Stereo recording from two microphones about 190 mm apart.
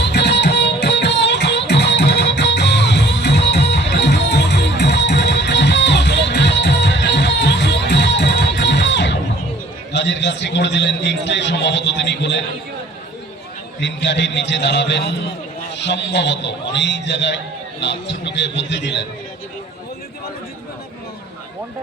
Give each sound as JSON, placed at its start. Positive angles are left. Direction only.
{"t": 0.0, "sound": "music", "side_deg": 65}
{"t": 9.9, "sound": "a sound", "side_deg": 65}
{"t": 13.7, "sound": "a man's voice", "side_deg": 70}